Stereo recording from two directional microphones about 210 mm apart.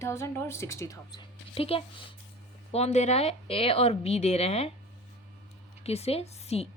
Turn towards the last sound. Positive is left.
turn(degrees=30)  # may be behind; listen again after turning